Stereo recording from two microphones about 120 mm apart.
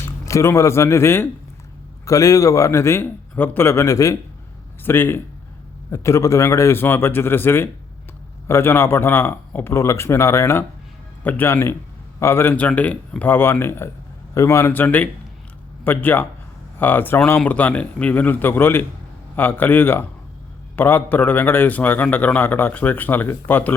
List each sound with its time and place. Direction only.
0.0 s a man's voice: 25° left (ahead or behind)